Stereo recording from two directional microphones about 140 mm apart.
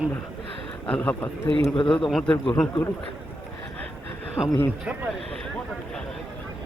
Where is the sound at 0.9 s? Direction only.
10° left (ahead or behind).